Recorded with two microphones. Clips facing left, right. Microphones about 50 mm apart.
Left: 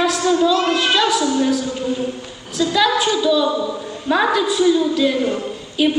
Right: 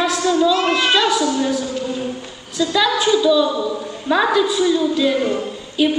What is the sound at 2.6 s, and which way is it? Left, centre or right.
A woman's voice, centre.